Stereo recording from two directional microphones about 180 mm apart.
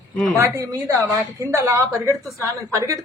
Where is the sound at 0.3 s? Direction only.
15° right (ahead or behind).